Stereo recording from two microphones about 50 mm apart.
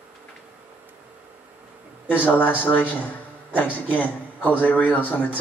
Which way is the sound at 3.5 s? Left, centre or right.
Left.